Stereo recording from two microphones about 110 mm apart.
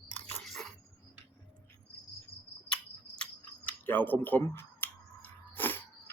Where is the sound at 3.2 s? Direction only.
15° left (ahead or behind).